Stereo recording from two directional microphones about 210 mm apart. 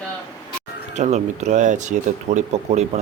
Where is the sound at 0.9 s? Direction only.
35° right (ahead or behind).